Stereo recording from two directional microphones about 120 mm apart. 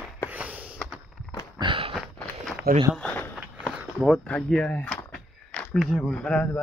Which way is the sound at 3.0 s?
10° left (ahead or behind).